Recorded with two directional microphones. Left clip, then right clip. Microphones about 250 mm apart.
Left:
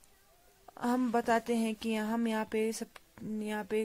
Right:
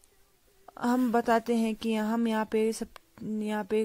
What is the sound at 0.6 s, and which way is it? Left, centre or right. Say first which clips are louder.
A woman's voice: right 4 dB; centre.